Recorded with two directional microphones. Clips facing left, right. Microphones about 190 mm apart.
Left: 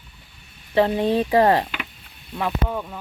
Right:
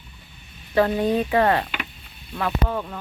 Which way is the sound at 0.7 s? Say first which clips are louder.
Left 1 dB; 25° left (ahead or behind).